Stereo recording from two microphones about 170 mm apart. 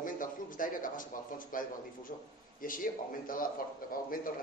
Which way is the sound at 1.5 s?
55° left (ahead or behind).